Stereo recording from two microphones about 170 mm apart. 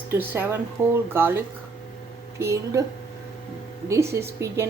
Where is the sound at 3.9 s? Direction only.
15° right (ahead or behind).